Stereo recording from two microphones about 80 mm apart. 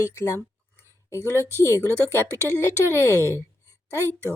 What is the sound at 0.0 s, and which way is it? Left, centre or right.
Speech, left.